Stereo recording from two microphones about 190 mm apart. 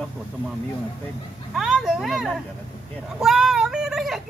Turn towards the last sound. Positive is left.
turn(degrees=0)  # may be behind; listen again after turning